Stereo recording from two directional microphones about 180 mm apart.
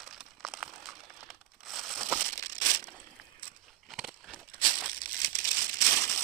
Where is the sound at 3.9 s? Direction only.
Centre (ahead or behind).